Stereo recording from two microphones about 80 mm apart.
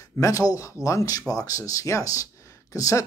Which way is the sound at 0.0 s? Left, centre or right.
Left.